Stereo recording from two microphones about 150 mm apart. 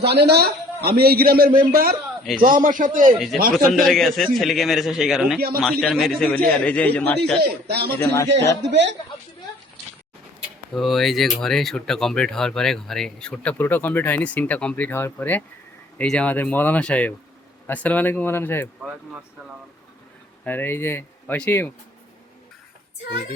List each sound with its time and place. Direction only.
0.0 s a man's voice: 90° right
2.4 s a man's voice: 65° right (ahead or behind)
3.5 s speech: centre (ahead or behind)
7.4 s a man's voice: 90° right
8.1 s a man's voice: 20° left (ahead or behind)
10.8 s speech: centre (ahead or behind)
20.4 s speech: 10° left (ahead or behind)